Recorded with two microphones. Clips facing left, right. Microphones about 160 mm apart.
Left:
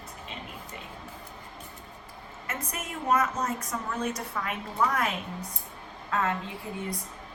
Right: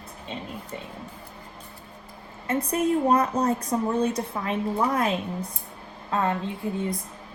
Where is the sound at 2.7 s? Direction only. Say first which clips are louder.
Right 7 dB; 35° right (ahead or behind).